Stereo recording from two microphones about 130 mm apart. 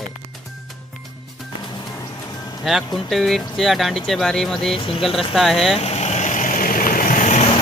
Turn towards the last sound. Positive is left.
turn(degrees=80)